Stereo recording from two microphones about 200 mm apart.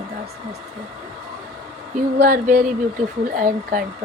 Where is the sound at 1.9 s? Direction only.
50° right (ahead or behind).